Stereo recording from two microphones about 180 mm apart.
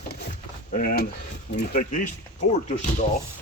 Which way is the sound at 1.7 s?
50° left (ahead or behind).